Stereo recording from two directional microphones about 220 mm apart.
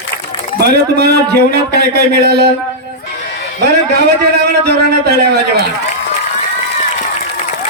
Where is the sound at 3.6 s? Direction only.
50° right (ahead or behind).